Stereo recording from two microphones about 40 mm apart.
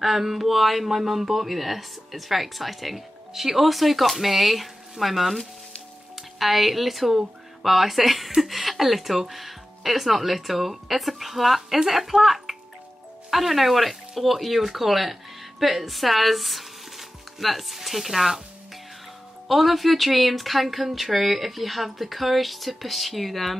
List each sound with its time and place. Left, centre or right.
0.0 s speech: centre
6.4 s speech: centre
19.4 s speech: centre